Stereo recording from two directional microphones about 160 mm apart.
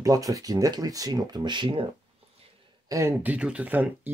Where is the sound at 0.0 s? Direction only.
20° right (ahead or behind).